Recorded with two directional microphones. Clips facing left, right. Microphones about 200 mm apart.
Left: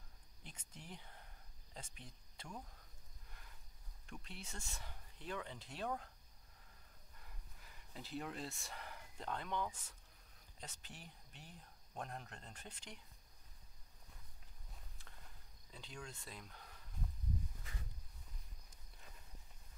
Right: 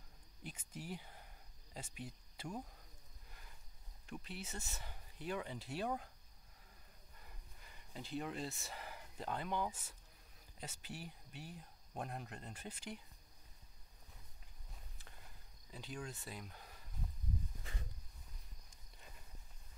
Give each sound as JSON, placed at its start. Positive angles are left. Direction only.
{"t": 0.4, "sound": "cricket", "side_deg": -5}
{"t": 4.2, "sound": "speech", "side_deg": -5}
{"t": 7.2, "sound": "speech", "side_deg": 0}
{"t": 15.7, "sound": "speech", "side_deg": -5}
{"t": 17.6, "sound": "a sound", "side_deg": -30}